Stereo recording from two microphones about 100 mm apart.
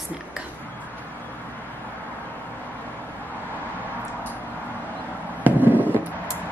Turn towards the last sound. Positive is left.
turn(degrees=-15)  # may be behind; listen again after turning